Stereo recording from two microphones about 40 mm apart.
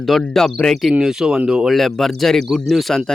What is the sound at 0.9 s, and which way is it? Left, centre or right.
Speech, centre.